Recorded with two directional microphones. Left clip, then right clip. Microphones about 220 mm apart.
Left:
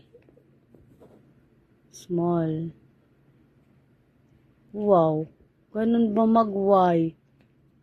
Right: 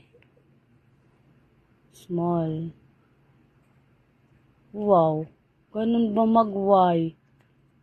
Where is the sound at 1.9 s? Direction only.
20° right (ahead or behind).